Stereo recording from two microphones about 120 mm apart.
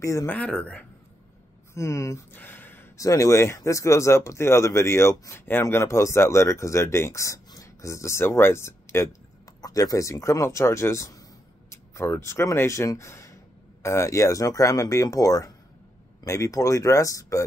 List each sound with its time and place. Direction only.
0.0 s speech: 25° left (ahead or behind)
0.4 s speech: 10° left (ahead or behind)
1.7 s a sound: 25° left (ahead or behind)
3.1 s speech: 25° left (ahead or behind)